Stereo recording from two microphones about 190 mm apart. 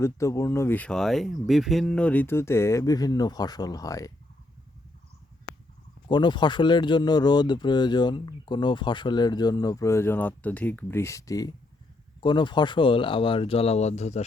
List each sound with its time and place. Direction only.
0.0 s speech: 15° left (ahead or behind)
6.1 s speech: 25° left (ahead or behind)